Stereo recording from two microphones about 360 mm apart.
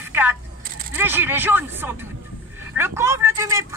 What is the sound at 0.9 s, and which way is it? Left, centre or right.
Speech, centre.